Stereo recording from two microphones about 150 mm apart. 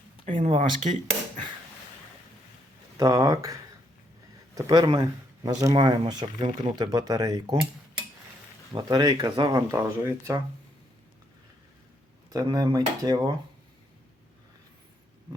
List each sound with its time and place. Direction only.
0.3 s speech: 50° right (ahead or behind)
3.0 s speech: 20° right (ahead or behind)
8.7 s speech: 25° right (ahead or behind)
12.3 s speech: 25° right (ahead or behind)